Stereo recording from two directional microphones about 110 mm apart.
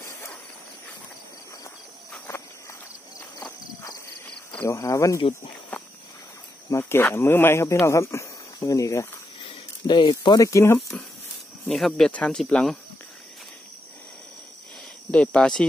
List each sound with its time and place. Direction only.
0.0 s a sound: 25° left (ahead or behind)
3.3 s horse: 35° left (ahead or behind)
4.6 s speech: 30° left (ahead or behind)
6.7 s speech: 20° left (ahead or behind)
9.4 s speech: 45° left (ahead or behind); by 11.0 s 25° left (ahead or behind)
11.6 s speech: 5° left (ahead or behind)
15.0 s speech: 10° left (ahead or behind)